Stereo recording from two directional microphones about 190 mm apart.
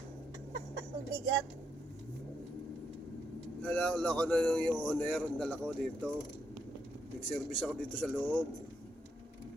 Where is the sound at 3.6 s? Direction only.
10° left (ahead or behind).